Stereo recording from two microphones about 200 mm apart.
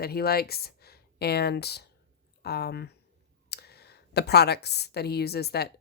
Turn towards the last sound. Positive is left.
turn(degrees=55)  # may be behind; listen again after turning